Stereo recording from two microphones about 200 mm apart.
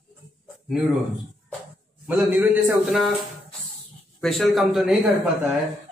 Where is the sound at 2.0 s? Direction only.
10° right (ahead or behind).